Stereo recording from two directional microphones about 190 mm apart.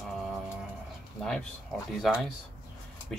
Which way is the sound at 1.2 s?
5° left (ahead or behind).